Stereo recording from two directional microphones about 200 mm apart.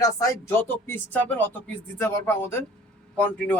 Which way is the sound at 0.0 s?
15° left (ahead or behind).